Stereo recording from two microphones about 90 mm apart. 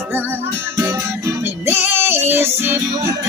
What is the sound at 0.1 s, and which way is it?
Music, 20° right (ahead or behind).